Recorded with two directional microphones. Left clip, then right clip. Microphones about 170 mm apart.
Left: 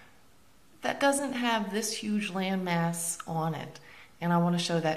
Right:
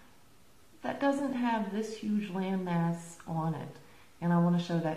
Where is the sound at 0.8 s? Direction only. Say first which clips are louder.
Left 4 dB; 5° left (ahead or behind).